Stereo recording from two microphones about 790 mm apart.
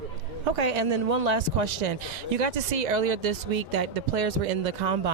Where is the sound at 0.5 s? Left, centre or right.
Right.